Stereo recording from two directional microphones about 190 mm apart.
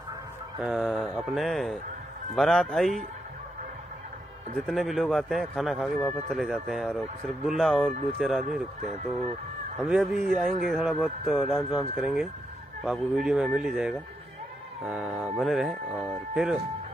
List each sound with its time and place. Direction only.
0.6 s speech: centre (ahead or behind)
4.6 s speech: centre (ahead or behind)
9.8 s speech: 5° right (ahead or behind)